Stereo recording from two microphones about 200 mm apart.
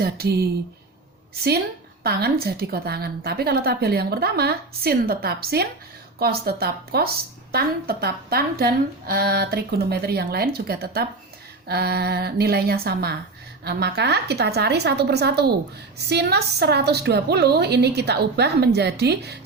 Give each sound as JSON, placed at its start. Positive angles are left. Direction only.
{"t": 0.0, "sound": "a woman's voice", "side_deg": -50}
{"t": 2.0, "sound": "a woman's voice", "side_deg": -50}